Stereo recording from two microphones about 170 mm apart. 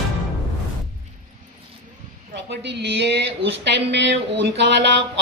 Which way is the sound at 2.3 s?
85° right.